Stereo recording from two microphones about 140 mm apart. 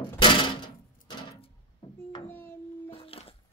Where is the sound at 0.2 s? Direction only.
35° left (ahead or behind).